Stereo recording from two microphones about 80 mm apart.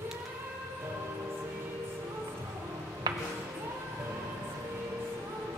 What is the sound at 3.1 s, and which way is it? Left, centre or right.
Music, right.